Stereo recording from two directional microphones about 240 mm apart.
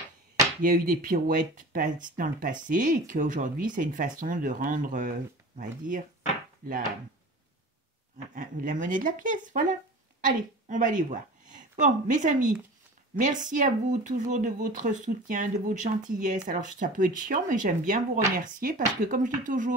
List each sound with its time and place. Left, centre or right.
0.6 s speech: right
8.4 s a woman's voice: right